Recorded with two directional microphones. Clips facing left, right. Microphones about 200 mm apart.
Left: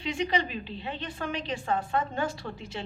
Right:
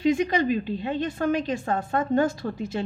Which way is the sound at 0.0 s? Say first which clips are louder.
Right 7 dB; 45° right (ahead or behind).